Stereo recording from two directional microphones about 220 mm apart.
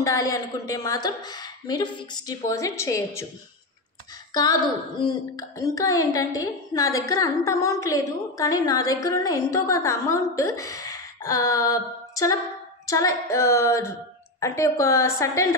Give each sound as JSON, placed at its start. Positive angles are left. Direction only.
{"t": 0.0, "sound": "a woman's voice", "side_deg": 15}
{"t": 4.3, "sound": "a woman's voice", "side_deg": 20}
{"t": 10.5, "sound": "a sound", "side_deg": 15}
{"t": 12.8, "sound": "a woman's voice", "side_deg": 15}